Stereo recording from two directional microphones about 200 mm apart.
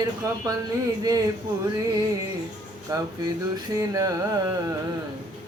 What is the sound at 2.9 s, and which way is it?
Speech, 20° right (ahead or behind).